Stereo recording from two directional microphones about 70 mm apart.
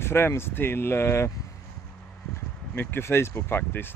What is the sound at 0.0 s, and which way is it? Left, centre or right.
Speech, left.